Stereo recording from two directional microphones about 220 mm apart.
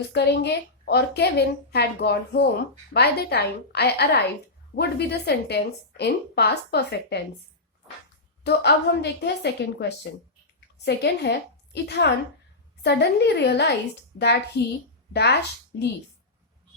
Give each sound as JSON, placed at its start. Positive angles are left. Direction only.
{"t": 0.1, "sound": "a woman's voice", "side_deg": 50}
{"t": 8.4, "sound": "a woman's voice", "side_deg": 50}